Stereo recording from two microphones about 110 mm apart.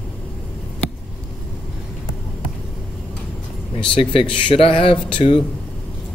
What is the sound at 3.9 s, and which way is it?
Speech, 55° left (ahead or behind).